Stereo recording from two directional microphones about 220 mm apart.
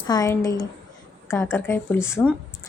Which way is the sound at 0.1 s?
15° left (ahead or behind).